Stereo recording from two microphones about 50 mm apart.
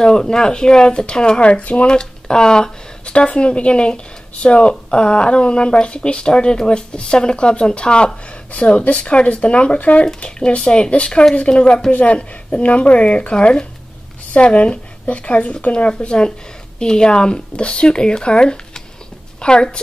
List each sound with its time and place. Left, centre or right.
0.0 s speech: centre